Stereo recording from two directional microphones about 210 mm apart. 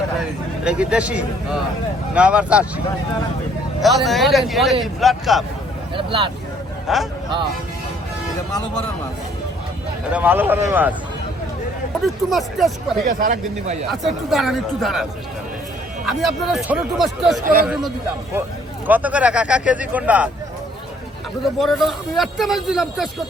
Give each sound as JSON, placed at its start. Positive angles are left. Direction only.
{"t": 0.6, "sound": "a man's voice", "side_deg": -5}
{"t": 6.0, "sound": "speech", "side_deg": -25}
{"t": 6.8, "sound": "speech", "side_deg": 0}
{"t": 10.1, "sound": "speech", "side_deg": -10}
{"t": 12.0, "sound": "a man's voice", "side_deg": 0}
{"t": 13.1, "sound": "speech", "side_deg": -40}
{"t": 14.3, "sound": "a man's voice", "side_deg": 0}
{"t": 16.0, "sound": "a man's voice", "side_deg": 0}
{"t": 17.4, "sound": "speech", "side_deg": -45}
{"t": 18.9, "sound": "speech", "side_deg": -5}
{"t": 21.6, "sound": "a man's voice", "side_deg": 0}